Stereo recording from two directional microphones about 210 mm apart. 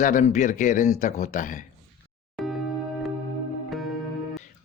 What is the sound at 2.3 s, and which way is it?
Music, centre (ahead or behind).